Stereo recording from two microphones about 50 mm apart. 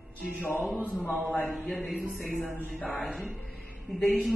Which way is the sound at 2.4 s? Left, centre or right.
Right.